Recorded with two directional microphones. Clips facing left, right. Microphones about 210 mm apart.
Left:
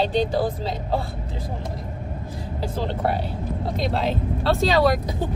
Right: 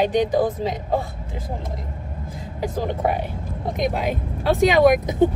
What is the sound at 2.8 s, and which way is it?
Speech, 15° right (ahead or behind).